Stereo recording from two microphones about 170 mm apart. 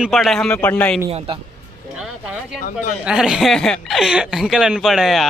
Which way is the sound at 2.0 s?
5° right (ahead or behind).